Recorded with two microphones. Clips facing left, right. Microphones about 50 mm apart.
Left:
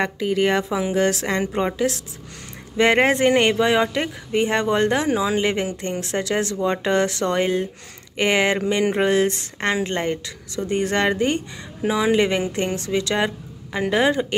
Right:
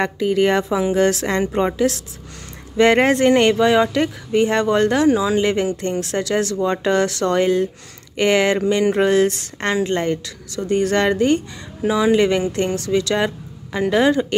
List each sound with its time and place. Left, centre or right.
0.0 s a woman's voice: centre